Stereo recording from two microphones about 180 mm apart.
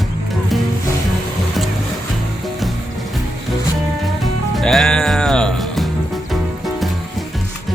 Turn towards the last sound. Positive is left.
turn(degrees=5)  # may be behind; listen again after turning